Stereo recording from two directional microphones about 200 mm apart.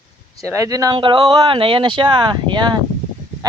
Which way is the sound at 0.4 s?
15° right (ahead or behind).